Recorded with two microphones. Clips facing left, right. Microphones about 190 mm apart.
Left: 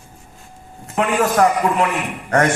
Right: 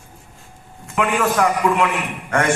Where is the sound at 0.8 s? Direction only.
35° left (ahead or behind).